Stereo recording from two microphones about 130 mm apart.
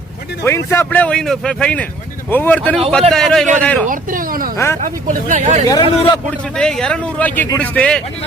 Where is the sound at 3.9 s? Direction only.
90° right.